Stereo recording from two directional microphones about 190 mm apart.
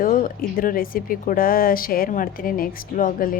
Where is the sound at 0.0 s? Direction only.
45° left (ahead or behind).